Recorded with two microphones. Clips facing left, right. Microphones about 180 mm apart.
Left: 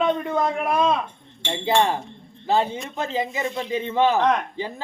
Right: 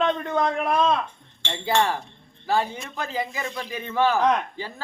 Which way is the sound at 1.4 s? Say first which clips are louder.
Left 3 dB; 20° left (ahead or behind).